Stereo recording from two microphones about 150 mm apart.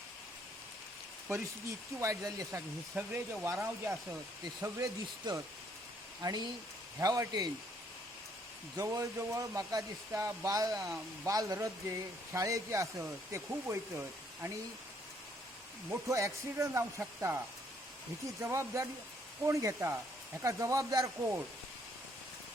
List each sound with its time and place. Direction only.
2.0 s speech: 20° right (ahead or behind)
8.7 s speech: 20° right (ahead or behind)
15.9 s speech: 20° right (ahead or behind)
18.4 s speech: 20° right (ahead or behind)